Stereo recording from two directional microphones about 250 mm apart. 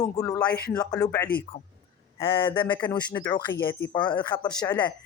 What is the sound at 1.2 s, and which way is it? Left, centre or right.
Speech, left.